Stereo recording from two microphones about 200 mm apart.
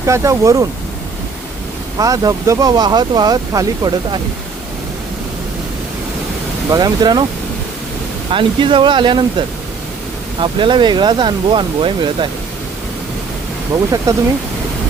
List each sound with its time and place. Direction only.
0.0 s speech: 15° right (ahead or behind)
2.0 s speech: 15° right (ahead or behind)
6.7 s speech: 20° right (ahead or behind)
8.3 s speech: 25° right (ahead or behind)
10.4 s speech: 25° right (ahead or behind)
14.1 s speech: 15° right (ahead or behind)